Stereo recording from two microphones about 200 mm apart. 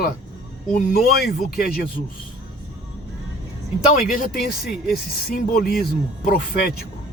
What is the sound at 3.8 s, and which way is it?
Speech, 40° left (ahead or behind).